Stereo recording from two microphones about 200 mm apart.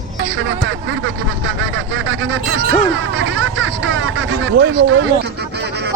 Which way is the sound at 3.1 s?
70° right (ahead or behind).